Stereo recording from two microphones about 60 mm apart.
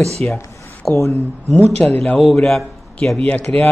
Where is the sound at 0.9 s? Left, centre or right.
Left.